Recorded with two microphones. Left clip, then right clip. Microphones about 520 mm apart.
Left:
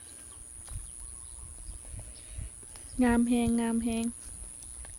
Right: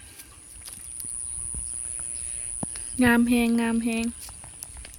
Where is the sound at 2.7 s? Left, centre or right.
Left.